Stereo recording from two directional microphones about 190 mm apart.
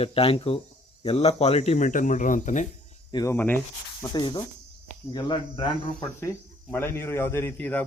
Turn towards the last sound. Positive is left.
turn(degrees=10)  # may be behind; listen again after turning